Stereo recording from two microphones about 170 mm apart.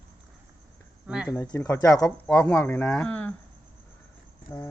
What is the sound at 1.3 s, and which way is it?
Speech, 20° left (ahead or behind).